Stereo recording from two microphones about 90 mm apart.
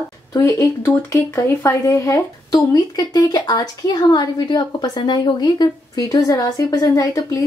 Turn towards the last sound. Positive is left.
turn(degrees=45)  # may be behind; listen again after turning